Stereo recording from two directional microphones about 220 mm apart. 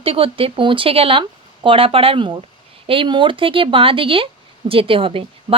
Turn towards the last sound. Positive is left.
turn(degrees=-25)  # may be behind; listen again after turning